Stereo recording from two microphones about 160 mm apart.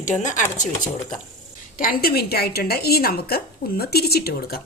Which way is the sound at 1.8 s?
65° left (ahead or behind).